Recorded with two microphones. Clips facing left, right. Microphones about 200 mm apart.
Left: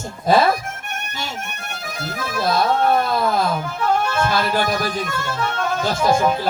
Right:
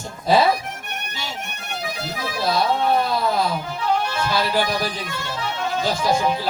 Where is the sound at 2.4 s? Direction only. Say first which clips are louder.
Left 2 dB; 50° left (ahead or behind).